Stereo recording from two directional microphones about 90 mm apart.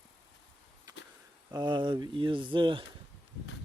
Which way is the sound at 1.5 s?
50° right (ahead or behind).